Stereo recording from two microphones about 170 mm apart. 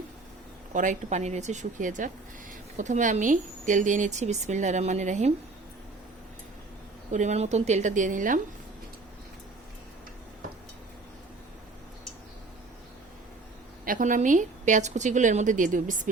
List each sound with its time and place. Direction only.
0.7 s a woman's voice: 50° right (ahead or behind)
7.1 s a woman's voice: 45° right (ahead or behind)
13.8 s a woman's voice: 50° right (ahead or behind)